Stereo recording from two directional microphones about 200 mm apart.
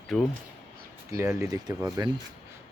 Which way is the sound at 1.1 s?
15° right (ahead or behind).